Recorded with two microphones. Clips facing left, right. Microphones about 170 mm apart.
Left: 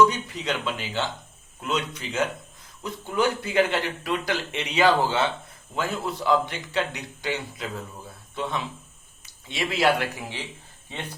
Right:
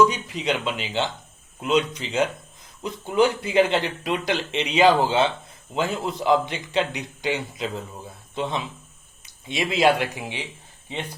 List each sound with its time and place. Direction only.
0.0 s speech: 15° right (ahead or behind)